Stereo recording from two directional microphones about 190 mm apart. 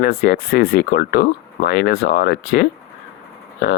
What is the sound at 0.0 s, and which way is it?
Speech, 60° left (ahead or behind).